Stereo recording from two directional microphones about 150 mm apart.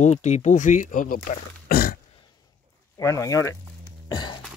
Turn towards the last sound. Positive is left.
turn(degrees=30)  # may be behind; listen again after turning